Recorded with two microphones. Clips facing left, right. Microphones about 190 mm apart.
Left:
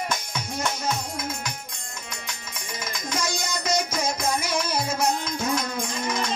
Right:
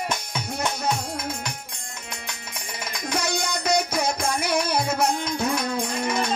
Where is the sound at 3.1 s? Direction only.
60° right (ahead or behind).